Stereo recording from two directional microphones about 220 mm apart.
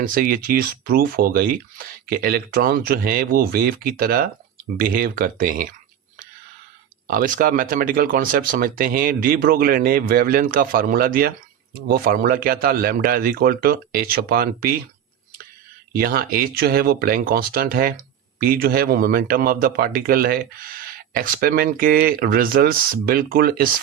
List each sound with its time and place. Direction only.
0.0 s speech: 40° right (ahead or behind)
7.1 s speech: 40° right (ahead or behind)
15.9 s speech: 45° right (ahead or behind)